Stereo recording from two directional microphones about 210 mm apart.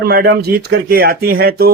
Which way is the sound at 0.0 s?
45° right (ahead or behind).